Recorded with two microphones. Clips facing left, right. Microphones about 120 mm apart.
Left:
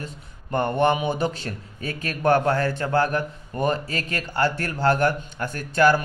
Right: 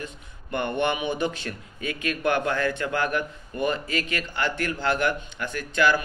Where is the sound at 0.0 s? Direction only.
40° left (ahead or behind).